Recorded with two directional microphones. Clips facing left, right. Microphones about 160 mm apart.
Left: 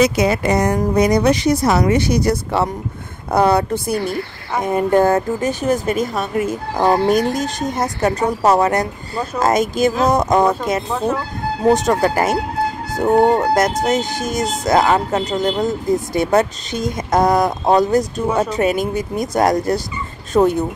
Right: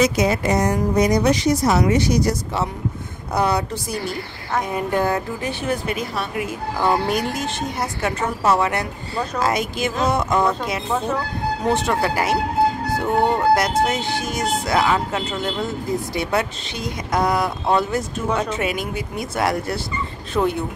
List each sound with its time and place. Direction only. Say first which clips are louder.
0.0 s a woman's voice: left 3 dB; 65° left (ahead or behind); by 10.4 s 40° left (ahead or behind)
11.7 s a woman's voice: left 5 dB; 40° left (ahead or behind)